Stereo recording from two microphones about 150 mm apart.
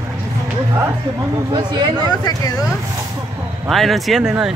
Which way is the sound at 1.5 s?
30° right (ahead or behind).